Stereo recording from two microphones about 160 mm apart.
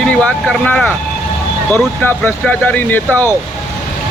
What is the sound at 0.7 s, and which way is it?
Speech, 10° left (ahead or behind).